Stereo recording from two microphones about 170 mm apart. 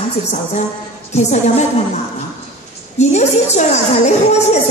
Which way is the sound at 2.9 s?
40° left (ahead or behind).